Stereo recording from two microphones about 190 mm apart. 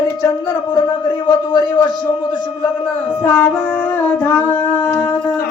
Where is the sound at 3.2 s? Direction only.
10° left (ahead or behind).